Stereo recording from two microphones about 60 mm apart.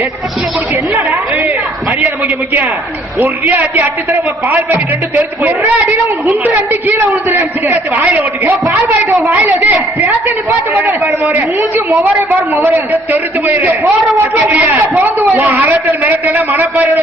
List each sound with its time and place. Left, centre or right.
3.2 s a man's voice: right
6.7 s a man's voice: right
11.2 s a man's voice: right